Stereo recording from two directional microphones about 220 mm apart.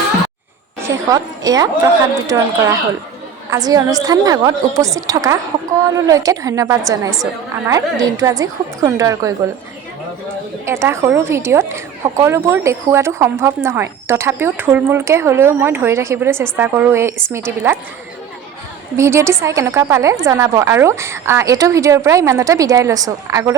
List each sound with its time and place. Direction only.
1.1 s a woman's voice: 15° right (ahead or behind)
10.7 s a woman's voice: 10° right (ahead or behind)
18.9 s a woman's voice: 10° right (ahead or behind)